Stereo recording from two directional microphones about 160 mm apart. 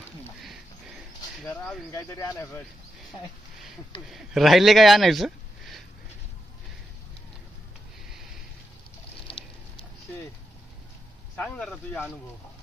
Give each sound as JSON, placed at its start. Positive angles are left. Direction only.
{"t": 1.9, "sound": "speech", "side_deg": 15}
{"t": 4.1, "sound": "speech", "side_deg": 0}
{"t": 9.3, "sound": "a sound", "side_deg": 35}
{"t": 11.3, "sound": "speech", "side_deg": 5}